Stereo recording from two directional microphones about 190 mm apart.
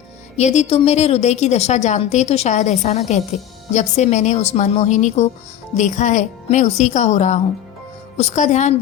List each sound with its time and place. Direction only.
0.3 s a woman's voice: 35° left (ahead or behind)